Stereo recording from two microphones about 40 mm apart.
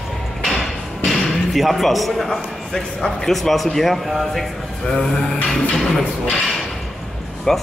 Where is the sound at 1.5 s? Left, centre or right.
Centre.